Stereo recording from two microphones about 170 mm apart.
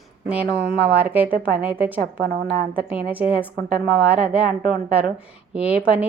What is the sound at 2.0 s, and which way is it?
Speech, 65° right (ahead or behind).